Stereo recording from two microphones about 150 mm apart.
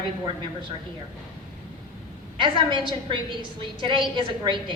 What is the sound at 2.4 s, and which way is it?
A woman's voice, 30° right (ahead or behind).